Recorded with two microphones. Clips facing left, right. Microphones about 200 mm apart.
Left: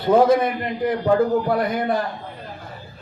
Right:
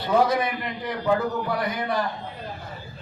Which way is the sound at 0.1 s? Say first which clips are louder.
Left 6 dB; 50° left (ahead or behind).